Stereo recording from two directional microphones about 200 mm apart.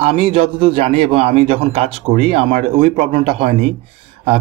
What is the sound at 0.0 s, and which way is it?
Speech, 30° right (ahead or behind).